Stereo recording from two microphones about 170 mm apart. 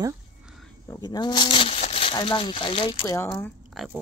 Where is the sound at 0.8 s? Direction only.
25° left (ahead or behind).